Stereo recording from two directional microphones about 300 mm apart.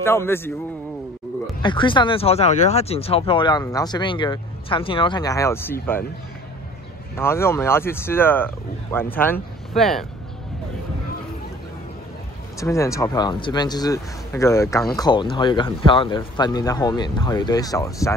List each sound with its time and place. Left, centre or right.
0.0 s speech: centre
1.6 s speech: centre
7.2 s speech: centre
12.5 s speech: centre